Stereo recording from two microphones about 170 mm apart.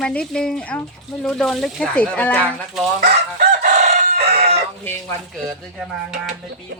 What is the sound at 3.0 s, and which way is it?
Chicken, 70° right (ahead or behind).